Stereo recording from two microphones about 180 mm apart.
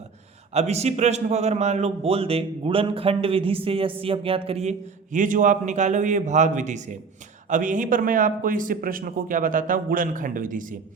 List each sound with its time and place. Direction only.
0.5 s a man's voice: 35° right (ahead or behind)